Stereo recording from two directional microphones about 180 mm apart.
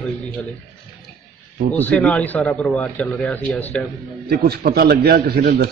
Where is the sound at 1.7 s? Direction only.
10° left (ahead or behind).